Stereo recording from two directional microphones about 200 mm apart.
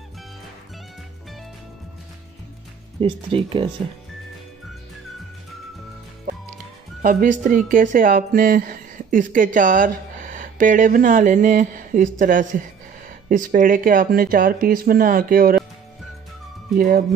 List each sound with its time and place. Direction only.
3.0 s speech: 25° right (ahead or behind)
7.0 s speech: 45° right (ahead or behind)
16.7 s speech: 45° right (ahead or behind)